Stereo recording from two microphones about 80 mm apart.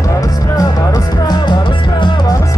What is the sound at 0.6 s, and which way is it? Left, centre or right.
Music, left.